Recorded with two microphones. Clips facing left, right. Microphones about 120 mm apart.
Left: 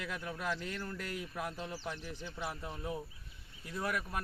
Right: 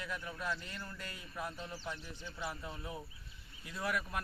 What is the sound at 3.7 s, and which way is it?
Speech, 45° left (ahead or behind).